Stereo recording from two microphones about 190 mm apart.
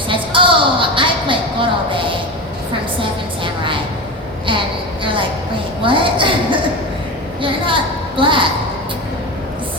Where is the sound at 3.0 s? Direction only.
25° right (ahead or behind).